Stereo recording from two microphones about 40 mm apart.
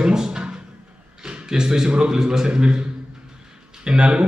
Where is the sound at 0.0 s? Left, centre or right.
Centre.